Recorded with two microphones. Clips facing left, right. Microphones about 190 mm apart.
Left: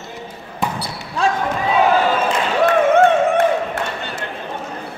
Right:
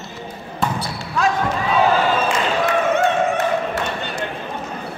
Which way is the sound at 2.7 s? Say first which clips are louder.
Left 7 dB; 55° left (ahead or behind).